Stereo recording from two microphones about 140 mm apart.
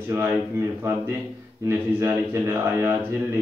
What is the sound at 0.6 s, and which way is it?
Speech, 20° right (ahead or behind).